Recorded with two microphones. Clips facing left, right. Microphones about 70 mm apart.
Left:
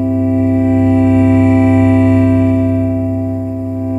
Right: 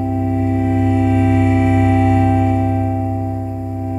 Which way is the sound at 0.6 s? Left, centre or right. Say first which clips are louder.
Left 5 dB; left.